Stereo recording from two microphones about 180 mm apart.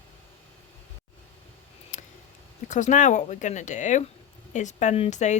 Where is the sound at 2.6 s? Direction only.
45° left (ahead or behind).